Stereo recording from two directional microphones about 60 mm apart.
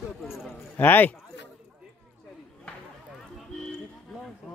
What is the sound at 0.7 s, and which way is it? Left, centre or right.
Speech, left.